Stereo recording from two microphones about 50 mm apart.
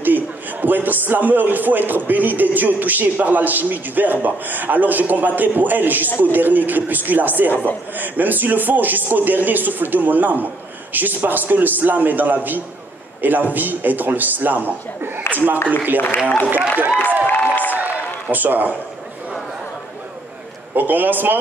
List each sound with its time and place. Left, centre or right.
0.0 s a man's voice: right
6.0 s speech: left
6.3 s a man's voice: right
17.3 s a sound: left
18.3 s a man's voice: right
20.7 s a man's voice: right